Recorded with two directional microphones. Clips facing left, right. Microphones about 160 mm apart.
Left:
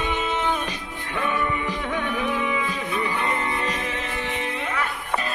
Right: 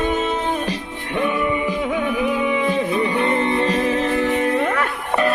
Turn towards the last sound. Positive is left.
turn(degrees=-60)  # may be behind; listen again after turning